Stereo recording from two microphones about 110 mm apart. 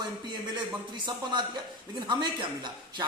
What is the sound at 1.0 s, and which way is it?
A man's voice, 45° right (ahead or behind).